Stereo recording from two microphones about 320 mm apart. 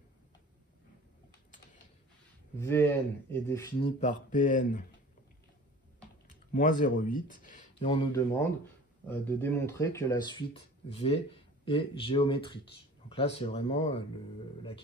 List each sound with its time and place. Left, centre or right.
2.6 s speech: centre
4.0 s speech: left
6.5 s speech: left
9.0 s speech: centre